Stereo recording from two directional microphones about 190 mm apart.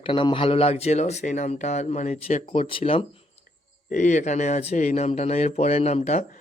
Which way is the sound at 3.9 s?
40° left (ahead or behind).